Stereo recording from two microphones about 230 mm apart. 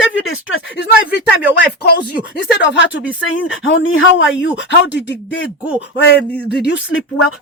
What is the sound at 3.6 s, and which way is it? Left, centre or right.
Speech, left.